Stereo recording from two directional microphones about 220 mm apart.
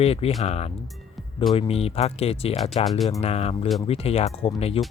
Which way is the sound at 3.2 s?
30° left (ahead or behind).